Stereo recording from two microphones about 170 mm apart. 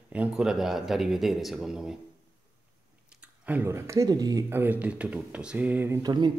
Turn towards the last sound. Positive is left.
turn(degrees=-25)  # may be behind; listen again after turning